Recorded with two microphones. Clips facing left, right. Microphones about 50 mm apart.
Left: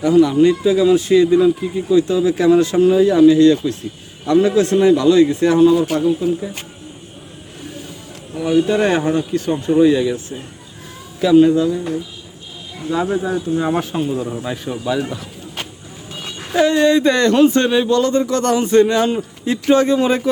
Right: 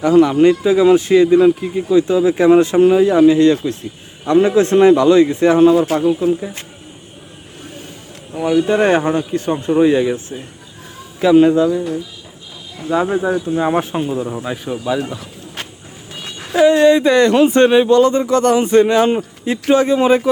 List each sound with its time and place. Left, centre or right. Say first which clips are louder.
0.0 s a man's voice: right 2 dB; right
8.6 s speech: right 2 dB; right
12.9 s speech: right 3 dB; right; by 15.3 s centre
16.5 s speech: right 3 dB; centre